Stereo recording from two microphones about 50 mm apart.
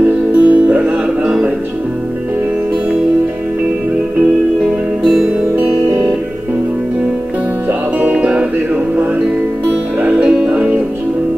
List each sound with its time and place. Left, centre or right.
0.3 s music: right
5.6 s music: right
8.2 s music: right
10.0 s music: right